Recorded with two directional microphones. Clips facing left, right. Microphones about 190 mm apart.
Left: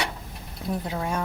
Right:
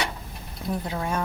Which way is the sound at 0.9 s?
10° left (ahead or behind).